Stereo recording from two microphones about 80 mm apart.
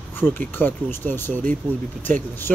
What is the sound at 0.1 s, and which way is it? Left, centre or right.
Speech, left.